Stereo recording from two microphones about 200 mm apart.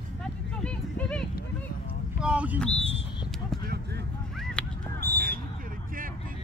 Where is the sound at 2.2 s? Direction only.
5° right (ahead or behind).